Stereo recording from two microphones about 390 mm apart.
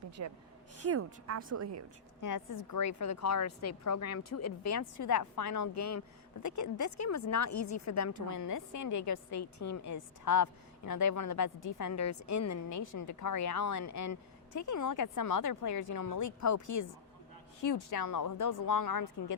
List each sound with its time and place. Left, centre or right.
0.2 s a woman's voice: right
2.2 s a woman's voice: left
17.9 s a woman's voice: left